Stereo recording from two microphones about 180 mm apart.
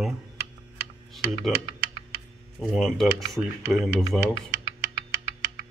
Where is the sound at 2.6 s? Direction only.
Centre (ahead or behind).